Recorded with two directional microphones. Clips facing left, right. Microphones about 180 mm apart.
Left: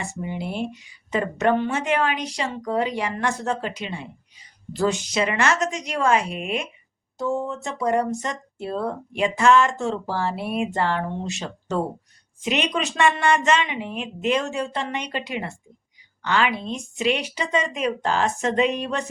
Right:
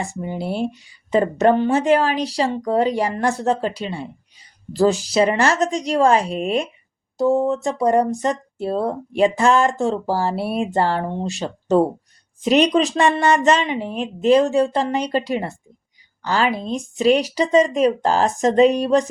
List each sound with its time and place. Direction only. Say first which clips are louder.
0.0 s speech: right 4 dB; 35° right (ahead or behind)